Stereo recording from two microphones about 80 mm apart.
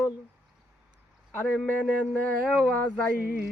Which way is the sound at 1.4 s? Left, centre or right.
Centre.